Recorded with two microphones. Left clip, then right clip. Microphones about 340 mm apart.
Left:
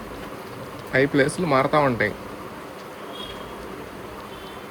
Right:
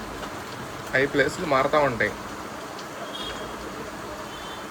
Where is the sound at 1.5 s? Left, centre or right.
Centre.